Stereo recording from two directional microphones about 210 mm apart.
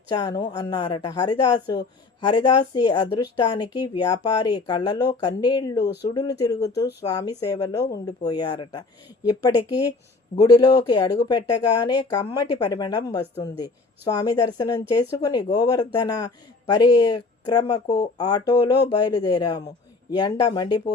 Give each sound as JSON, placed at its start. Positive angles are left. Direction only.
{"t": 0.1, "sound": "speech", "side_deg": 20}
{"t": 5.8, "sound": "speech", "side_deg": 55}
{"t": 6.5, "sound": "speech", "side_deg": 15}